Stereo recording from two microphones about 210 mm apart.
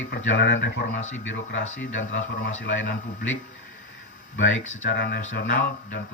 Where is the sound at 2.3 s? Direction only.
45° left (ahead or behind).